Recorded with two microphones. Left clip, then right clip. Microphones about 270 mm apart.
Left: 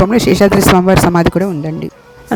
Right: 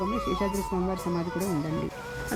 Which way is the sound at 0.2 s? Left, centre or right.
Left.